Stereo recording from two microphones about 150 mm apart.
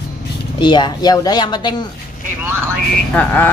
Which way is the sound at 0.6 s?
30° left (ahead or behind).